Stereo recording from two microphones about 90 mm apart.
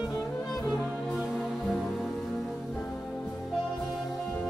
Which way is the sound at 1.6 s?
10° left (ahead or behind).